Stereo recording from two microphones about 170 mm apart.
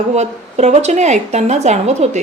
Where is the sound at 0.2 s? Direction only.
40° right (ahead or behind).